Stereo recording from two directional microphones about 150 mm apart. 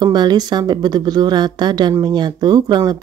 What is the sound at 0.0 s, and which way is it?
Speech, 30° right (ahead or behind).